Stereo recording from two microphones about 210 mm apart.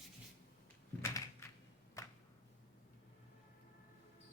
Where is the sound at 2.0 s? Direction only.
15° left (ahead or behind).